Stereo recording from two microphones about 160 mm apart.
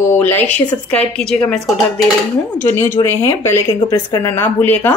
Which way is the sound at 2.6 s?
15° left (ahead or behind).